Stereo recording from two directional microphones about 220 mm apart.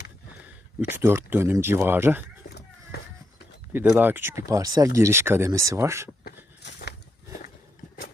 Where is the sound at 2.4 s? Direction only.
45° left (ahead or behind).